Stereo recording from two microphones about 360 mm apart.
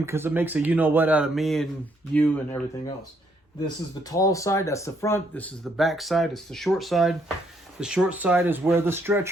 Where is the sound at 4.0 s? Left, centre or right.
Centre.